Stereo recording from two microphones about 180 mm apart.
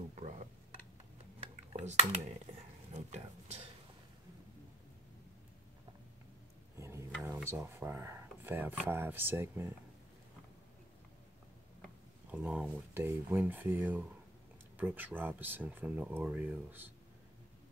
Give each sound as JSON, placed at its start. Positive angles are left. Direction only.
{"t": 0.1, "sound": "a sound", "side_deg": -40}
{"t": 1.4, "sound": "cutlery", "side_deg": -35}
{"t": 2.9, "sound": "speech", "side_deg": -40}
{"t": 6.8, "sound": "a sound", "side_deg": -15}
{"t": 7.2, "sound": "speech", "side_deg": -10}
{"t": 12.3, "sound": "speech", "side_deg": -10}